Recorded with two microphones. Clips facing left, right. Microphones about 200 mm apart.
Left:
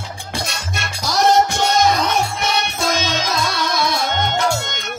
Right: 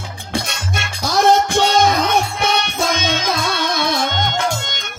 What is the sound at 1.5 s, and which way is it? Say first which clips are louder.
Music: right 3 dB; 55° right (ahead or behind).